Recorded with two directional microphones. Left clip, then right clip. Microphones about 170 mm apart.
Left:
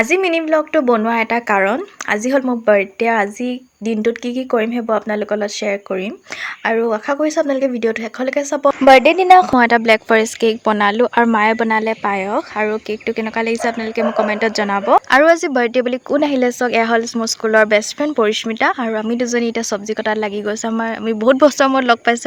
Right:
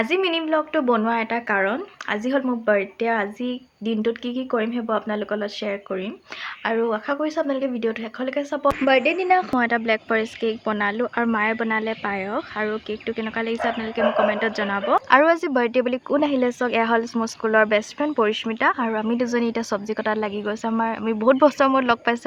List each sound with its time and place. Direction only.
0.0 s speech: 30° left (ahead or behind)
15.1 s a woman's voice: 25° left (ahead or behind)